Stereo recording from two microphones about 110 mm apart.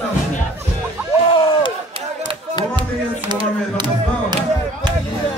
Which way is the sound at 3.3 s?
45° right (ahead or behind).